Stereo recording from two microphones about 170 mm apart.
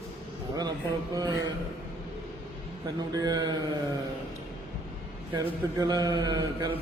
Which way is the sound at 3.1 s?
20° right (ahead or behind).